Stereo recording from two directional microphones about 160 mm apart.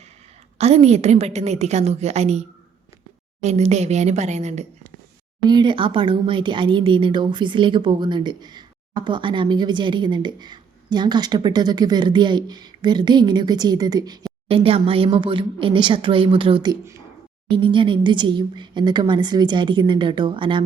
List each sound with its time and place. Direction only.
0.6 s a woman's voice: 40° right (ahead or behind)
5.5 s speech: 30° right (ahead or behind)
14.4 s speech: 35° right (ahead or behind)